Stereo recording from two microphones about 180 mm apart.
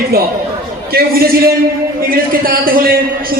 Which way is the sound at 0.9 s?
55° right (ahead or behind).